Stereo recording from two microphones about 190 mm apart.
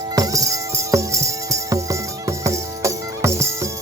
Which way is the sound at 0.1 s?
20° right (ahead or behind).